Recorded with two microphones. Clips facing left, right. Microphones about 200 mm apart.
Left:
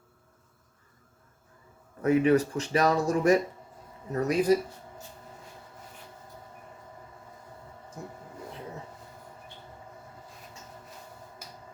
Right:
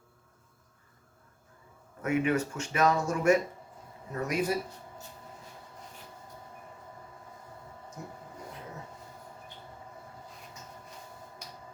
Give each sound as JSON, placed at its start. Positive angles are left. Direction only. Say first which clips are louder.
{"t": 2.0, "sound": "speech", "louder": "left 6 dB", "side_deg": 35}